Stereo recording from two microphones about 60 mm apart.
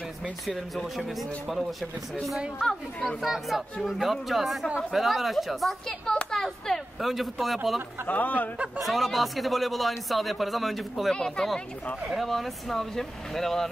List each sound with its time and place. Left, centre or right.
0.5 s speech: centre
3.3 s speech: centre
8.1 s speech: left
8.7 s speech: centre
11.1 s speech: centre